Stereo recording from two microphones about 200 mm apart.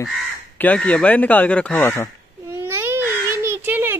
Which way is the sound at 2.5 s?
10° right (ahead or behind).